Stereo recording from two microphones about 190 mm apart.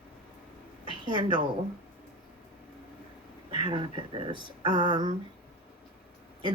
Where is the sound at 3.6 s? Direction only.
25° right (ahead or behind).